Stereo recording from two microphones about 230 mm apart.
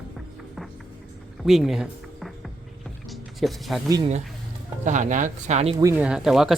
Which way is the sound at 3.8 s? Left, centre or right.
Centre.